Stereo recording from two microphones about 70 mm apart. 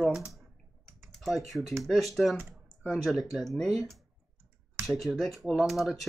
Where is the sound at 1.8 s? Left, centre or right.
Centre.